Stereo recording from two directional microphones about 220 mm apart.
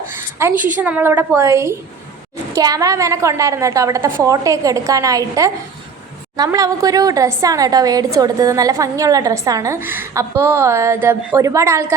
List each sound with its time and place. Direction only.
0.5 s a woman's voice: 35° right (ahead or behind)
0.8 s a woman's voice: 5° right (ahead or behind)